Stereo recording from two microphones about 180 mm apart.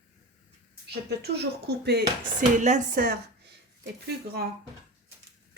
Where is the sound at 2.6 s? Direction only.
40° right (ahead or behind).